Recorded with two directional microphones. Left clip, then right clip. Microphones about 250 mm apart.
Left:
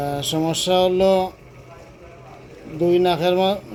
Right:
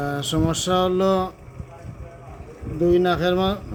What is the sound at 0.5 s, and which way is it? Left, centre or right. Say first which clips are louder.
Speech: left 5 dB; right.